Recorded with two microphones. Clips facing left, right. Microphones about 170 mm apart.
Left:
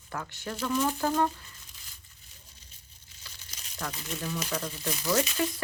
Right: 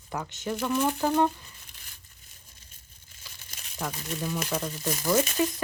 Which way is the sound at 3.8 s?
15° right (ahead or behind).